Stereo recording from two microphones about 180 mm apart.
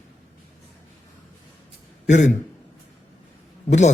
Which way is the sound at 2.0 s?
40° left (ahead or behind).